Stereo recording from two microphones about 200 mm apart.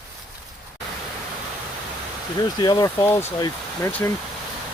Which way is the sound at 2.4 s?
20° left (ahead or behind).